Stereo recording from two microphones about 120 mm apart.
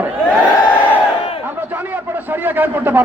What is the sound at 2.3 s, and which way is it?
Speech, 15° right (ahead or behind).